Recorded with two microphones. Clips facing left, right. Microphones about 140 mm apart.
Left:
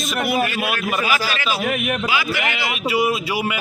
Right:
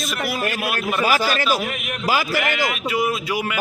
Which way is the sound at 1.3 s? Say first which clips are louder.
Right 1 dB; 45° right (ahead or behind).